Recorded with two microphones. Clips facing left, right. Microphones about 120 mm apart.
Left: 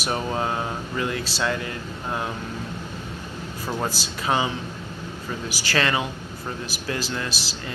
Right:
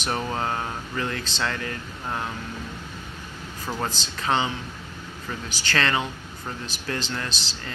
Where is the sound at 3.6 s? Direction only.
10° left (ahead or behind).